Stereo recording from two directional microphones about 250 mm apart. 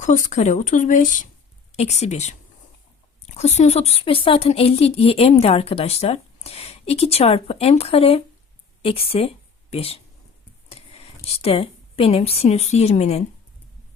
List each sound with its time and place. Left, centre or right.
0.0 s speech: left
11.3 s speech: left